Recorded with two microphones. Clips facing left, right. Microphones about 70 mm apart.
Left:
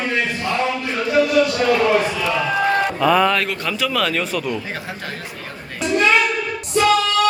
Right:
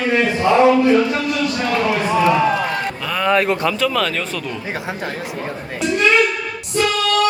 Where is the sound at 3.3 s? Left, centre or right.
Right.